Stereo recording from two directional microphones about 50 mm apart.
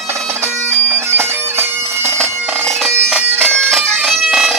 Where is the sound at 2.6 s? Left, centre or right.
Centre.